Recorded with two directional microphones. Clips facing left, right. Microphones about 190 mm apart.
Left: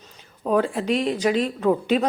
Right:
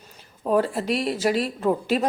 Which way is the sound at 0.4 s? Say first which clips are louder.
Left 1 dB; 5° right (ahead or behind).